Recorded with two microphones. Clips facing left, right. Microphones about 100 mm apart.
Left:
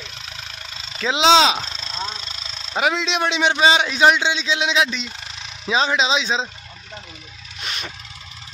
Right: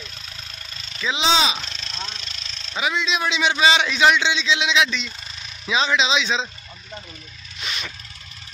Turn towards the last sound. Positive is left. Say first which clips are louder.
# even
turn(degrees=45)  # may be behind; listen again after turning